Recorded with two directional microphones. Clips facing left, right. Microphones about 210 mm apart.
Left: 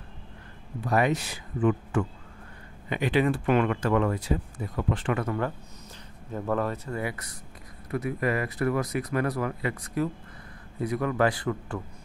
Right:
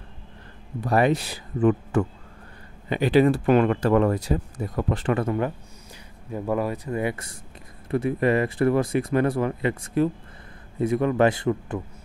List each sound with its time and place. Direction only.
0.7 s speech: 35° right (ahead or behind)
6.3 s speech: 10° right (ahead or behind)